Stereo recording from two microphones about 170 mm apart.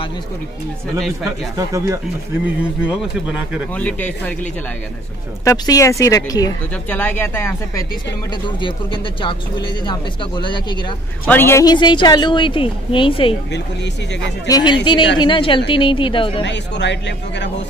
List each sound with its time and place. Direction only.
0.9 s speech: centre (ahead or behind)
2.4 s speech: 5° right (ahead or behind)
3.7 s speech: 10° left (ahead or behind)
5.4 s a woman's voice: 20° left (ahead or behind)
6.9 s speech: 10° left (ahead or behind)
8.5 s a woman's voice: 30° left (ahead or behind)
11.2 s a woman's voice: 15° left (ahead or behind); by 13.4 s 30° left (ahead or behind)
14.5 s a woman's voice: 25° left (ahead or behind)
16.4 s speech: 90° left